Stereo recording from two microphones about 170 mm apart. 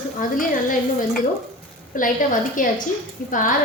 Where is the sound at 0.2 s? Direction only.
55° left (ahead or behind).